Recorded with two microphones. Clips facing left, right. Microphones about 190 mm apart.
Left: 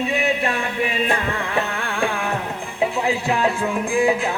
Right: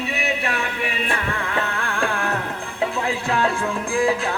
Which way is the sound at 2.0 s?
15° left (ahead or behind).